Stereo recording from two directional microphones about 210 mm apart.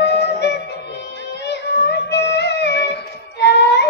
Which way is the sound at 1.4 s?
55° left (ahead or behind).